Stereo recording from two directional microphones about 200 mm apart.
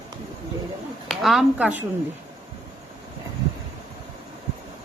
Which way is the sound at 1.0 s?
Centre (ahead or behind).